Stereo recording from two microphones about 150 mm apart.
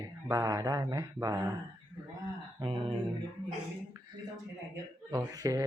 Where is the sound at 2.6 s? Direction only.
35° right (ahead or behind).